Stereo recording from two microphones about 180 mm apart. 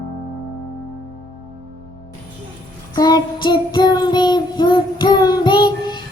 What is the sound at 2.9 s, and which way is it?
Child singing, 25° left (ahead or behind).